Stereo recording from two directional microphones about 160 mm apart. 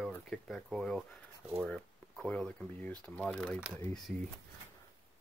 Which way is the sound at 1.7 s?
5° left (ahead or behind).